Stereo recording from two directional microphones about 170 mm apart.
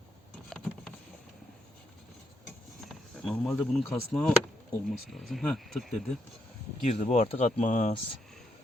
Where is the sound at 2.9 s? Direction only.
Centre (ahead or behind).